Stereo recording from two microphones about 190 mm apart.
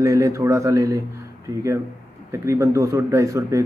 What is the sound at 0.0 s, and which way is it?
A man's voice, 15° right (ahead or behind).